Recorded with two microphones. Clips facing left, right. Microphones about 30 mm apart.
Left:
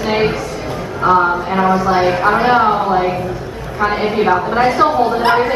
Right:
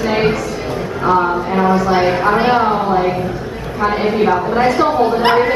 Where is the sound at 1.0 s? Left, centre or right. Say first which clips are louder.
Left 2 dB; centre.